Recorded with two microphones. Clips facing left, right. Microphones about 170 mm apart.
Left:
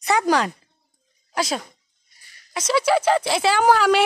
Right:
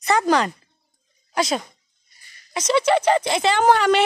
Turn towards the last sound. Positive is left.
turn(degrees=5)  # may be behind; listen again after turning